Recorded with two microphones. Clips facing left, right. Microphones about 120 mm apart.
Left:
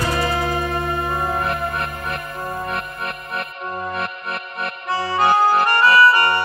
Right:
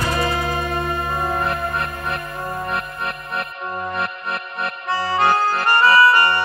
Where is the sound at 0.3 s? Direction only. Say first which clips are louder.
Left 1 dB; 25° left (ahead or behind).